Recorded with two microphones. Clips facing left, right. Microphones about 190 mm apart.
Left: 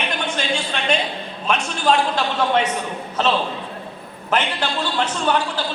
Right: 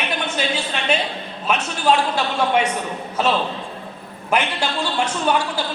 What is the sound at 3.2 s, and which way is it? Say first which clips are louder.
A man's voice: even; 10° right (ahead or behind).